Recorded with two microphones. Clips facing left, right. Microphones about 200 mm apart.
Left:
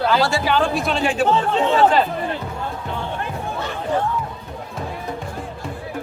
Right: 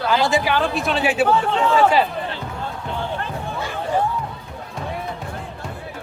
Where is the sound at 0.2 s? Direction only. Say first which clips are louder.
Even; 15° right (ahead or behind).